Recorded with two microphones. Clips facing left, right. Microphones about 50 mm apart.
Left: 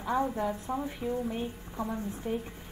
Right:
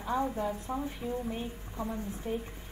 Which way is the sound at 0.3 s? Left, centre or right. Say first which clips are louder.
Left 2 dB; centre.